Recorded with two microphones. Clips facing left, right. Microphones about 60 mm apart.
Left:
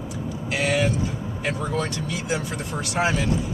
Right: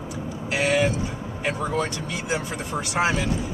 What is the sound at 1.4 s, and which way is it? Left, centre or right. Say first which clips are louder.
Speech: right 1 dB; centre.